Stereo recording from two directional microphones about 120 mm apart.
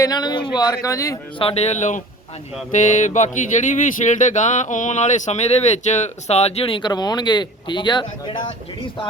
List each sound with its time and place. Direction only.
0.0 s speech: 35° left (ahead or behind)
1.4 s speech: 55° left (ahead or behind); by 2.0 s 75° left (ahead or behind)
2.7 s speech: 90° left; by 8.4 s 40° left (ahead or behind)